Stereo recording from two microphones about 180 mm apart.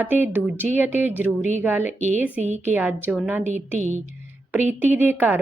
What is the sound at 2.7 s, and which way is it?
Speech, 10° right (ahead or behind).